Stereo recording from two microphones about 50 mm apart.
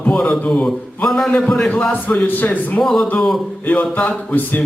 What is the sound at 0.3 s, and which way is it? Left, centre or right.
Speech, left.